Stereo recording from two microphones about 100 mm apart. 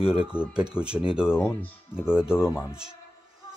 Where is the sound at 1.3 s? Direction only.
25° left (ahead or behind).